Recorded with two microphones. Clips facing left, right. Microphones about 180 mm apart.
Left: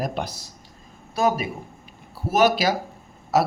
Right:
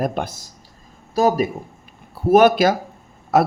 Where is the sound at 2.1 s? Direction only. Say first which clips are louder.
Right 7 dB; 55° right (ahead or behind).